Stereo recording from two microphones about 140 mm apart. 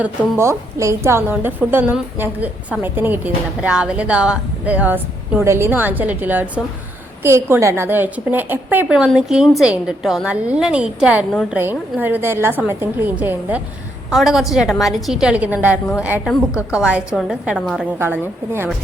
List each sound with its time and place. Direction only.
0.0 s a woman's voice: 15° right (ahead or behind)
14.1 s a woman's voice: centre (ahead or behind)
18.0 s a woman's voice: 15° right (ahead or behind)